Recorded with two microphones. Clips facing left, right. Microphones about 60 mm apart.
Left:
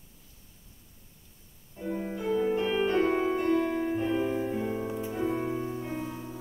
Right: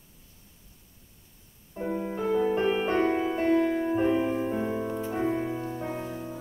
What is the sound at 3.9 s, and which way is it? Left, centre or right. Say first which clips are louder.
Music: right 3 dB; right.